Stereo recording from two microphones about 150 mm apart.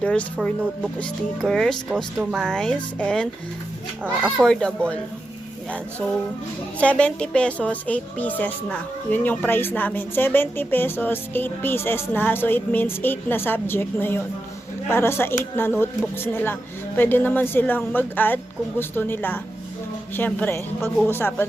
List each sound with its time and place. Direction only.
0.0 s speech: 10° left (ahead or behind)
4.0 s speech: 10° right (ahead or behind)
4.4 s speech: 5° left (ahead or behind)
6.7 s speech: 10° left (ahead or behind)